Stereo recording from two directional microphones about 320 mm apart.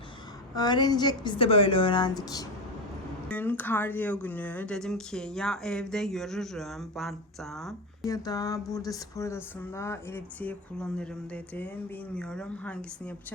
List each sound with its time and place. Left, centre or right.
0.5 s a woman's voice: centre
12.1 s speech: centre